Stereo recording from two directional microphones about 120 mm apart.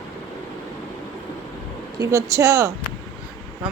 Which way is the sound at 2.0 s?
25° right (ahead or behind).